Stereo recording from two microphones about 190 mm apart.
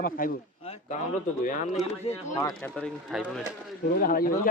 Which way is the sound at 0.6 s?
30° left (ahead or behind).